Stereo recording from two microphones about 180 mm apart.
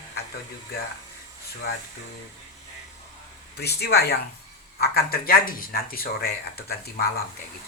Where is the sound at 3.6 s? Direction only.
65° left (ahead or behind).